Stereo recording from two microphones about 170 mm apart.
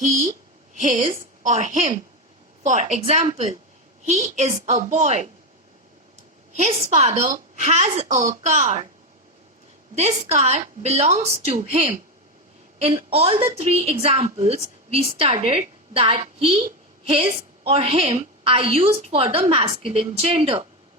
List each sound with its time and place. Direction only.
0.0 s a woman's voice: 50° right (ahead or behind)
6.5 s a woman's voice: 40° right (ahead or behind)
9.9 s a woman's voice: 40° right (ahead or behind)